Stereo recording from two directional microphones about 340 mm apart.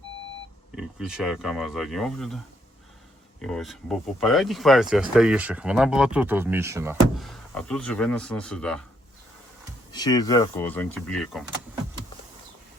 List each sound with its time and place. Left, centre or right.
0.8 s speech: centre
3.4 s speech: centre
9.9 s speech: centre